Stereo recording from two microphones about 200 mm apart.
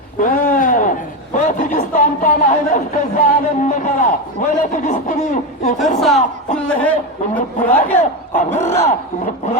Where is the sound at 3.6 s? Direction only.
40° left (ahead or behind).